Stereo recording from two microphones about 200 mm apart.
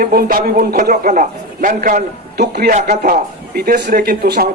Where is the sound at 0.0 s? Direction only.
45° right (ahead or behind).